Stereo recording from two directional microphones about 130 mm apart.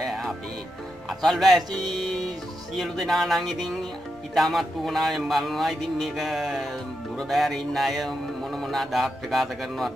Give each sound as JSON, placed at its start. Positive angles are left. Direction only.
{"t": 0.0, "sound": "music", "side_deg": 0}
{"t": 1.2, "sound": "speech", "side_deg": 0}